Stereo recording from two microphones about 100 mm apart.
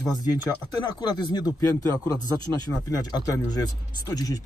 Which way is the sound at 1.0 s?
45° left (ahead or behind).